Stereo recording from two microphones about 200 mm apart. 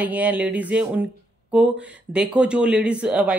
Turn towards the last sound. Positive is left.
turn(degrees=-5)  # may be behind; listen again after turning